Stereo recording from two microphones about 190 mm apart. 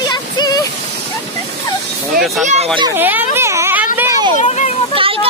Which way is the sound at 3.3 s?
15° right (ahead or behind).